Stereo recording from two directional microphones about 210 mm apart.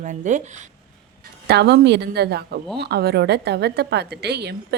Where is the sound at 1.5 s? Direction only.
50° right (ahead or behind).